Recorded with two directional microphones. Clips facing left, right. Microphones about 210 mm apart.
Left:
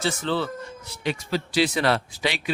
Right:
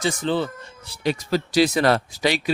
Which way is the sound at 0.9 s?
40° right (ahead or behind).